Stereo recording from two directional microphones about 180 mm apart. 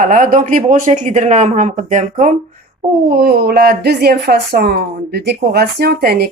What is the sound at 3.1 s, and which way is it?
Speech, 60° right (ahead or behind).